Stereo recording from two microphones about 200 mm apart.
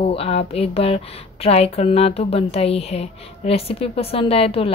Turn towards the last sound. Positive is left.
turn(degrees=30)  # may be behind; listen again after turning